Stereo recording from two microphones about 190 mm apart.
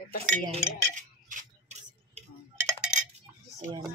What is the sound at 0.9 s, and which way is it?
Tick-tock, 40° right (ahead or behind).